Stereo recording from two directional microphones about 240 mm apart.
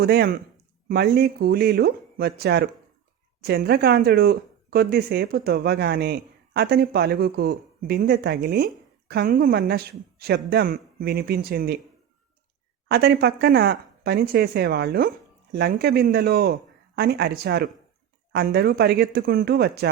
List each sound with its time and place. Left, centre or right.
0.0 s speech: right
12.9 s speech: right